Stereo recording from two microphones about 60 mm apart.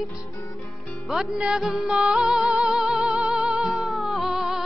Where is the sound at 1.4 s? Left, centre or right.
Centre.